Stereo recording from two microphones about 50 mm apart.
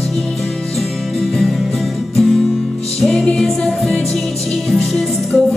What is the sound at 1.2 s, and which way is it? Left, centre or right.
Music, centre.